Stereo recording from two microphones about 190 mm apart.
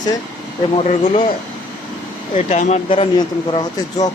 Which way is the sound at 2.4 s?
35° left (ahead or behind).